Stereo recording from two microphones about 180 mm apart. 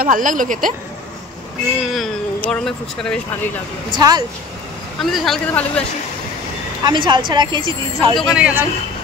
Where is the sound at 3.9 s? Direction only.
25° right (ahead or behind).